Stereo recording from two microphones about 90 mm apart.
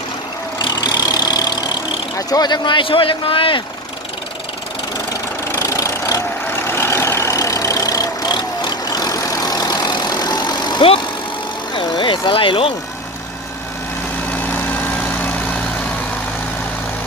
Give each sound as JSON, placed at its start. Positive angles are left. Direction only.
{"t": 0.6, "sound": "vehicle", "side_deg": 50}
{"t": 2.1, "sound": "speech", "side_deg": 45}
{"t": 5.5, "sound": "vehicle", "side_deg": 35}
{"t": 11.7, "sound": "vehicle", "side_deg": 60}
{"t": 14.3, "sound": "vehicle", "side_deg": 20}